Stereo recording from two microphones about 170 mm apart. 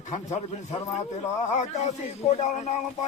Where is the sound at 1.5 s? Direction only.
40° left (ahead or behind).